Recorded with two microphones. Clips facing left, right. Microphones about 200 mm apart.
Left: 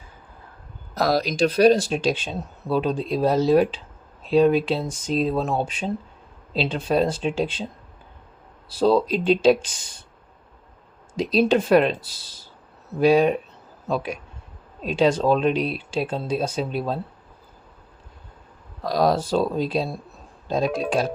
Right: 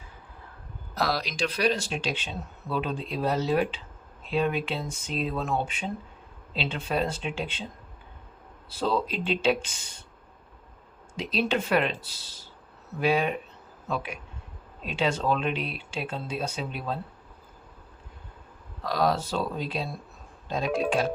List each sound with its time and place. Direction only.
0.9 s speech: 45° left (ahead or behind)
8.8 s speech: 40° left (ahead or behind)
11.2 s speech: 40° left (ahead or behind)
13.0 s speech: 40° left (ahead or behind)
18.8 s speech: 40° left (ahead or behind)
20.7 s speech: centre (ahead or behind)